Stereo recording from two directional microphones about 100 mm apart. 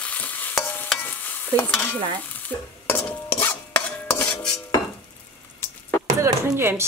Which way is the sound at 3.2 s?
20° left (ahead or behind).